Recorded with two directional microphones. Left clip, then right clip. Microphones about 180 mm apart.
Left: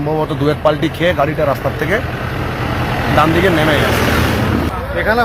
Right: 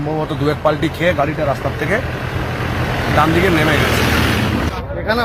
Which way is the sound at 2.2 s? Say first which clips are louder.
Left 2 dB; 55° right (ahead or behind).